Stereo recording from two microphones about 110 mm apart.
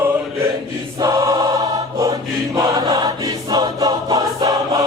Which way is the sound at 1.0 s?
30° right (ahead or behind).